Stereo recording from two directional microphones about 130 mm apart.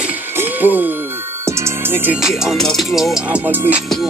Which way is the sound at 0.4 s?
15° right (ahead or behind).